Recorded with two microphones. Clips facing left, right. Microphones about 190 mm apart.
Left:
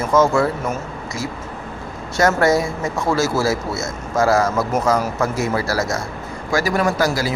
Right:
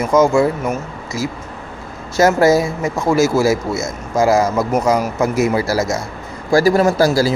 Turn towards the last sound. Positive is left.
turn(degrees=-35)  # may be behind; listen again after turning